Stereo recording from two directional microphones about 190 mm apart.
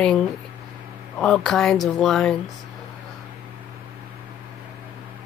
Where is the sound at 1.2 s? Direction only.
5° left (ahead or behind).